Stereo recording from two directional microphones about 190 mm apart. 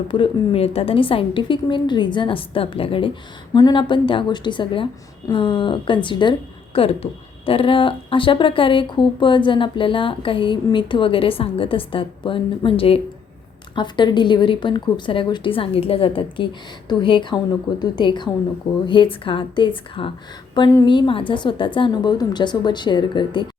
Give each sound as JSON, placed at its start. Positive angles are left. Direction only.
{"t": 0.1, "sound": "speech", "side_deg": 30}